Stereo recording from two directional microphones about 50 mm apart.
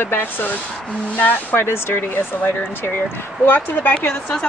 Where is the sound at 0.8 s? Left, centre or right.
Left.